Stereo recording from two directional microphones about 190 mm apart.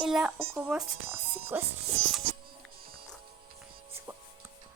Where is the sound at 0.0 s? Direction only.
5° right (ahead or behind).